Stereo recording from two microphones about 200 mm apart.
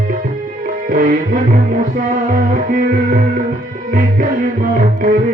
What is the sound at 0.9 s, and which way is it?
Music, 45° right (ahead or behind).